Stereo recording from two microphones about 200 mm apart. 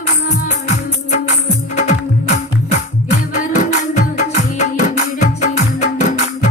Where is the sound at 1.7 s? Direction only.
35° left (ahead or behind).